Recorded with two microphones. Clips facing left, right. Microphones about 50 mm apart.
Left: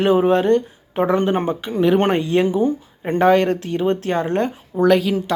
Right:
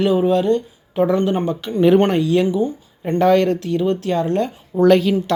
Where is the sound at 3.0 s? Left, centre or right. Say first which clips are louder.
Even; left.